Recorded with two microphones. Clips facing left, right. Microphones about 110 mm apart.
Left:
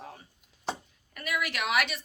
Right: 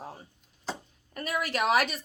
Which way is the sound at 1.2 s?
35° right (ahead or behind).